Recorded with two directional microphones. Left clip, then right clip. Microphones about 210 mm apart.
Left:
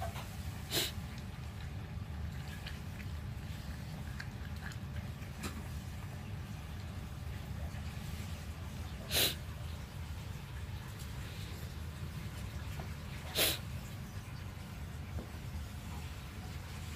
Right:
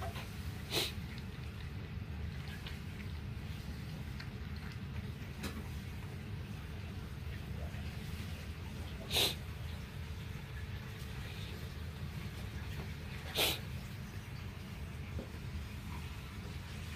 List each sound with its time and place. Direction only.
0.7 s a sound: 10° left (ahead or behind)
9.1 s dog: 15° left (ahead or behind)
13.3 s dog: 15° left (ahead or behind)